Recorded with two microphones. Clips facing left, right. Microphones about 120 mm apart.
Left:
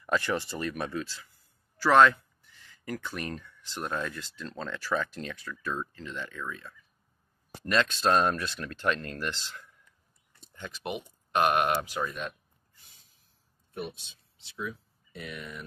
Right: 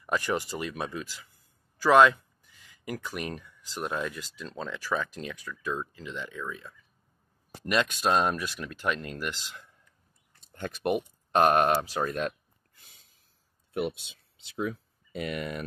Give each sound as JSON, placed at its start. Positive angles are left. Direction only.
{"t": 0.0, "sound": "speech", "side_deg": -15}
{"t": 10.5, "sound": "speech", "side_deg": -55}
{"t": 11.3, "sound": "speech", "side_deg": -35}
{"t": 12.0, "sound": "speech", "side_deg": -65}
{"t": 14.6, "sound": "speech", "side_deg": -80}